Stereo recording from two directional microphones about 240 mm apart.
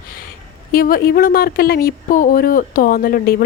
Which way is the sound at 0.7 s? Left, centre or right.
Left.